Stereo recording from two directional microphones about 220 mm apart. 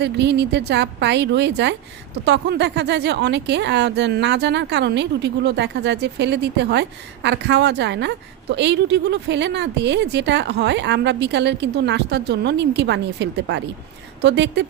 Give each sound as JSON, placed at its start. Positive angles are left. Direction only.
{"t": 0.0, "sound": "speech", "side_deg": -50}